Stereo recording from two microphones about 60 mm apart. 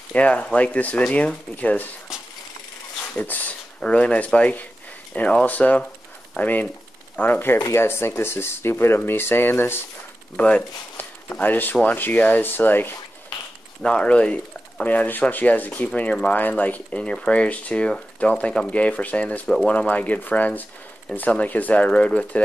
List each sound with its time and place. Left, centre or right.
0.1 s speech: left
3.2 s speech: left
7.7 s speech: left
10.3 s speech: left
13.8 s speech: centre
19.4 s speech: centre
19.7 s speech: left